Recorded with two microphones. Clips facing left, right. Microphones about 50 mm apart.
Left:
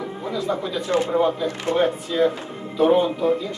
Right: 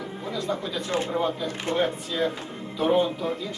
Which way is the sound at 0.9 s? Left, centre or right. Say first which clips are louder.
Left 6 dB; left.